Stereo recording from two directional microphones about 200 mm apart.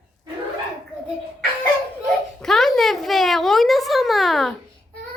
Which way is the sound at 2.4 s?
Centre (ahead or behind).